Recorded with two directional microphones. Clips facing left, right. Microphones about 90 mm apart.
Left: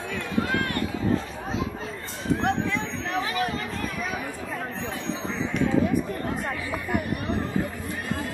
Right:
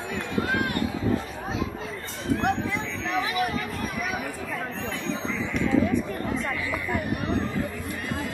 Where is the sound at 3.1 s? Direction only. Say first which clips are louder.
Right 1 dB; 40° left (ahead or behind).